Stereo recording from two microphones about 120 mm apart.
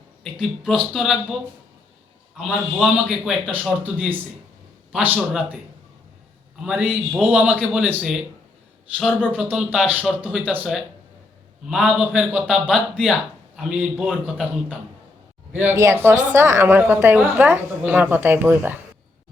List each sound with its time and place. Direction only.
0.2 s a man's voice: 5° right (ahead or behind)
2.4 s a man's voice: 5° right (ahead or behind)
5.3 s a woman's voice: 10° right (ahead or behind)
6.7 s a woman's voice: 15° right (ahead or behind)
9.0 s a man's voice: 5° left (ahead or behind)
9.3 s a woman's voice: 10° right (ahead or behind)
11.7 s a woman's voice: 5° right (ahead or behind)
15.7 s a woman's voice: 25° right (ahead or behind)